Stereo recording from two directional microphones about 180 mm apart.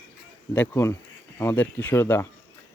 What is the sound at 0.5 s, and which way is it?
Speech, 10° left (ahead or behind).